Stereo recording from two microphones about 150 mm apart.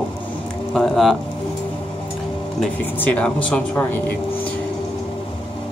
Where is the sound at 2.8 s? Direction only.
10° left (ahead or behind).